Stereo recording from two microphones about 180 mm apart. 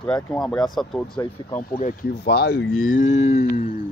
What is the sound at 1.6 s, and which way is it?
Speech, 50° left (ahead or behind).